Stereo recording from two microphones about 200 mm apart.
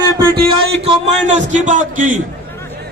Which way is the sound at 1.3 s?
35° right (ahead or behind).